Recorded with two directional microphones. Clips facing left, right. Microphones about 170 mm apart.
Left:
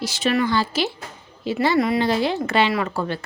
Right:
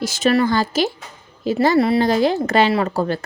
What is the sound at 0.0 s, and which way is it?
A woman's voice, 45° right (ahead or behind).